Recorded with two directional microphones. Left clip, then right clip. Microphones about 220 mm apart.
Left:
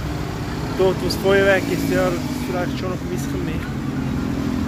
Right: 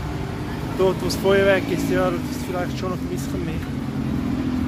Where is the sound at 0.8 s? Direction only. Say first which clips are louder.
Left 1 dB; 10° right (ahead or behind).